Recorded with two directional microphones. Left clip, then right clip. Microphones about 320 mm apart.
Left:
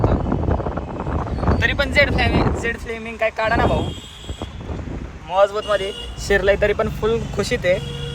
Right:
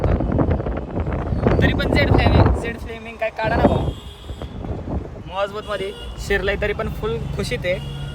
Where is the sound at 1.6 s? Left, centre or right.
Centre.